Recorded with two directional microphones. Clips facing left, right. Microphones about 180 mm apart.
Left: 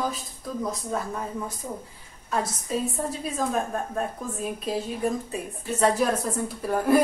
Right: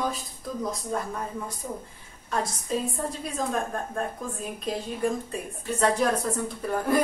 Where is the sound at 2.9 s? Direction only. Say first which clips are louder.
Left 2 dB; 5° left (ahead or behind).